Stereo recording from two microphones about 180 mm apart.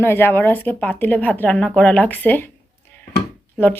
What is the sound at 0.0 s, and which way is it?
Speech, 15° left (ahead or behind).